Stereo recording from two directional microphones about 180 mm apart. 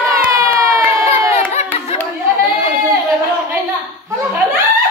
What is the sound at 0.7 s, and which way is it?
Crowd, 15° right (ahead or behind).